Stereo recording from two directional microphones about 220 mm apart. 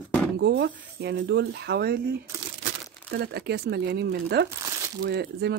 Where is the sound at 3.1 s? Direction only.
45° right (ahead or behind).